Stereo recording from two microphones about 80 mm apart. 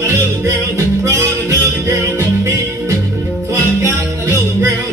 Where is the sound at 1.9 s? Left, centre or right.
Right.